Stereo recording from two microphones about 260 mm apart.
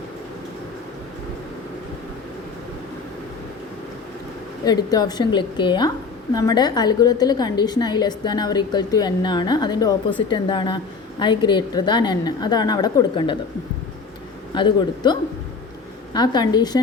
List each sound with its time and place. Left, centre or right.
4.6 s a woman's voice: centre
14.5 s a woman's voice: centre